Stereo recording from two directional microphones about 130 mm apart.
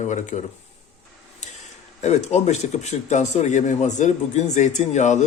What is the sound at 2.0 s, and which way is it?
Speech, 60° left (ahead or behind).